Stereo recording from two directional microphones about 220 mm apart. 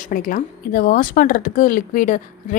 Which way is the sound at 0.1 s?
40° left (ahead or behind).